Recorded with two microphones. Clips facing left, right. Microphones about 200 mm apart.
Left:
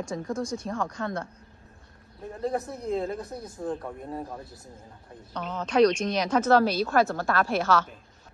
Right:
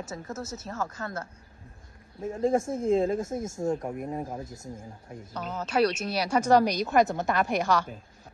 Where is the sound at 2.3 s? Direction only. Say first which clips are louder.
Right 5 dB; 25° right (ahead or behind).